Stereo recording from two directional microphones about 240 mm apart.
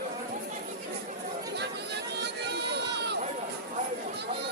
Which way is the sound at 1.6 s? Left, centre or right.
Right.